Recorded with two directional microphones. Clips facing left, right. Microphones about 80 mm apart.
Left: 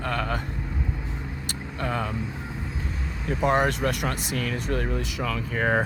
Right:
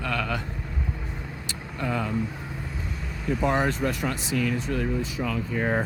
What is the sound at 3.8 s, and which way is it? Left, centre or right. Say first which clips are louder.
Speech: left 1 dB; left.